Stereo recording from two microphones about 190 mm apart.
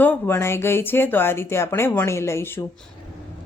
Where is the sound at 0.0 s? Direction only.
10° left (ahead or behind).